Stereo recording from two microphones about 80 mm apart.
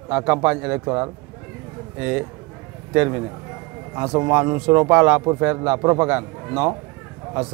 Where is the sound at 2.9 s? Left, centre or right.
Right.